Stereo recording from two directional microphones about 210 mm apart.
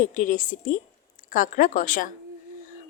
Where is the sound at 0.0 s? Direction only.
35° left (ahead or behind).